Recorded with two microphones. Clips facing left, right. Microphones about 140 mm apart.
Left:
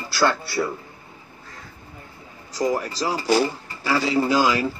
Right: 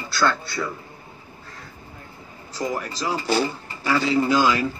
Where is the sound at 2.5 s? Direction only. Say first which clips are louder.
Left 4 dB; 35° left (ahead or behind).